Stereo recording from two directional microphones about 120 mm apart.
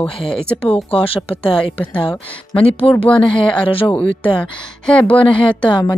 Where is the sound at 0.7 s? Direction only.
50° left (ahead or behind).